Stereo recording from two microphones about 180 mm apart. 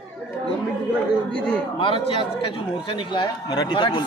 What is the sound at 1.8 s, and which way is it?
Speech, 30° left (ahead or behind).